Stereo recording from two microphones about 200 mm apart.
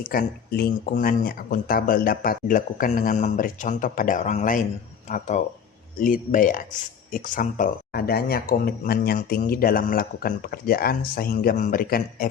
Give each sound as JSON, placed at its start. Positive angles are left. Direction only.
{"t": 0.0, "sound": "speech", "side_deg": 45}